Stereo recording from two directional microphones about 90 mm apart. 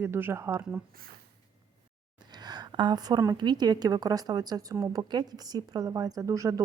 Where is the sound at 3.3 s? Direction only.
55° right (ahead or behind).